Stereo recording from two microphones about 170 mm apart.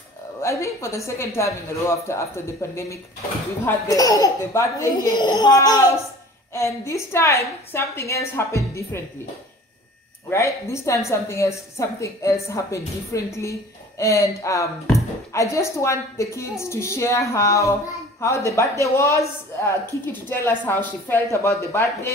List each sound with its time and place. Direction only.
0.4 s a woman's voice: 15° left (ahead or behind)
10.3 s a woman's voice: 15° left (ahead or behind)